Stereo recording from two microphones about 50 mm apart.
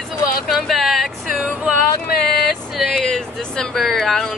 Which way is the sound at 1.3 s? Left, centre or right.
Right.